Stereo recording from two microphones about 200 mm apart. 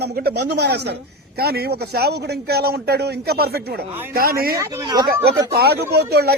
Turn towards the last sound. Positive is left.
turn(degrees=-55)  # may be behind; listen again after turning